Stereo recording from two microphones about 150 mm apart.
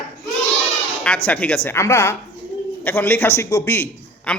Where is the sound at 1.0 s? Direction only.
10° left (ahead or behind).